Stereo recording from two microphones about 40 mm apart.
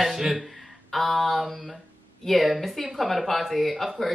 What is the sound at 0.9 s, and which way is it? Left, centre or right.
Speech, centre.